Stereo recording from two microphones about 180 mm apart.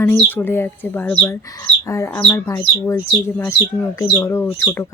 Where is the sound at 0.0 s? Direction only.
10° left (ahead or behind).